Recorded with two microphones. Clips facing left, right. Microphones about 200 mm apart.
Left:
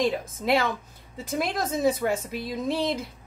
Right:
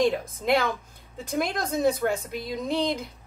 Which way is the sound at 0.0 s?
Centre (ahead or behind).